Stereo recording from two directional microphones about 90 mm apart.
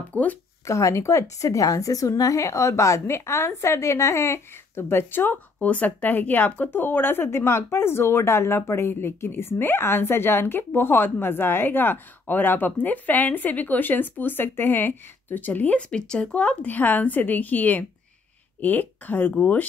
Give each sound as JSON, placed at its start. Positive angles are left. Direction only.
{"t": 0.1, "sound": "speech", "side_deg": 15}
{"t": 0.7, "sound": "a woman's voice", "side_deg": 35}